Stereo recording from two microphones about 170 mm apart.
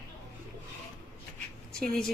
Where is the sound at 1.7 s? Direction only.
5° left (ahead or behind).